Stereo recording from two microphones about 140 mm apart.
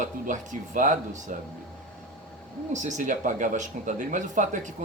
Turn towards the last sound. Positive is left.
turn(degrees=-65)  # may be behind; listen again after turning